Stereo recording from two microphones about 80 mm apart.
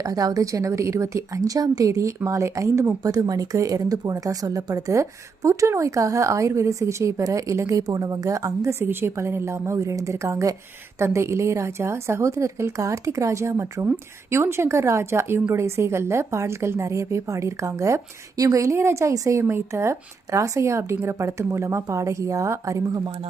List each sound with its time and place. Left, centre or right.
0.0 s a woman's voice: right
3.1 s speech: right
8.8 s a woman's voice: right